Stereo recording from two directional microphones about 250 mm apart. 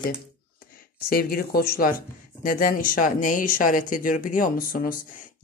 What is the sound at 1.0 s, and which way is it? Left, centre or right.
Speech, left.